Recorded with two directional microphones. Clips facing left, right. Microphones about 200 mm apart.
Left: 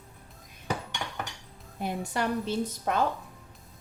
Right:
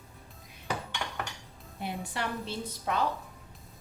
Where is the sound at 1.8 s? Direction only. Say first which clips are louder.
Left 5 dB; 45° left (ahead or behind).